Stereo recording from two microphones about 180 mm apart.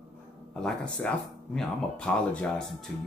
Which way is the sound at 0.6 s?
5° left (ahead or behind).